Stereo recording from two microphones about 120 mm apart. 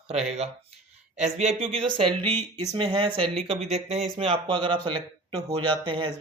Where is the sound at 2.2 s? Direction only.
15° left (ahead or behind).